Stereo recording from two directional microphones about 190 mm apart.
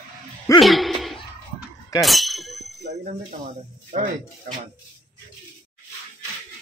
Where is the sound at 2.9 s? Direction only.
40° right (ahead or behind).